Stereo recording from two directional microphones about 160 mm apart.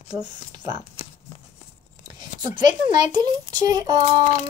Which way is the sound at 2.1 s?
25° right (ahead or behind).